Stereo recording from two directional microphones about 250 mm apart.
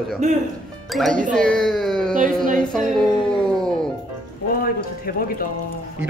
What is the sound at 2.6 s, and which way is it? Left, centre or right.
Speech, centre.